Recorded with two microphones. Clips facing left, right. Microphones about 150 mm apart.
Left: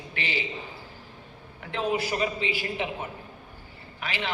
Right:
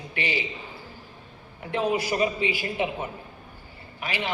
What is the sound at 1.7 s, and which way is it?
A woman's voice, 15° right (ahead or behind).